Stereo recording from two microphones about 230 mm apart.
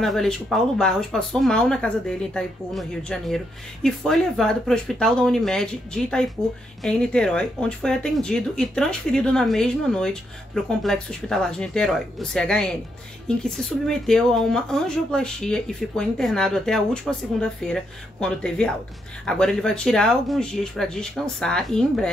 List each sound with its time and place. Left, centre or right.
0.0 s speech: centre